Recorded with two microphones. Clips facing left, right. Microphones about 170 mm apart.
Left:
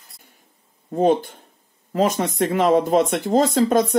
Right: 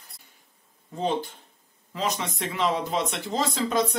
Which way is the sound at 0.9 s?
50° left (ahead or behind).